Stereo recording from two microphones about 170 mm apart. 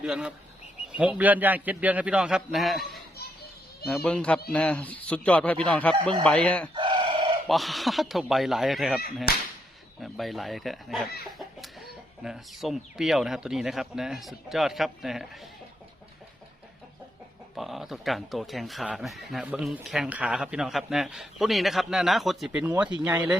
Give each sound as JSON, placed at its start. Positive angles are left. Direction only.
{"t": 0.0, "sound": "a man's voice", "side_deg": -5}
{"t": 6.7, "sound": "chicken", "side_deg": -30}
{"t": 7.4, "sound": "speech", "side_deg": 0}
{"t": 9.3, "sound": "whip", "side_deg": 65}
{"t": 10.0, "sound": "speech", "side_deg": 0}
{"t": 17.5, "sound": "a man's voice", "side_deg": 0}